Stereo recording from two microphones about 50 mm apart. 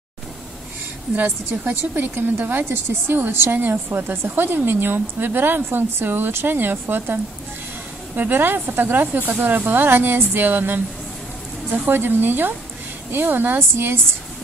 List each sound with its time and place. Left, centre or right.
1.1 s a woman's voice: right
3.5 s speech: right
8.2 s a woman's voice: right